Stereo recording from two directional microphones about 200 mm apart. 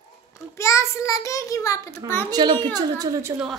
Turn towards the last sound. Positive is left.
turn(degrees=-20)  # may be behind; listen again after turning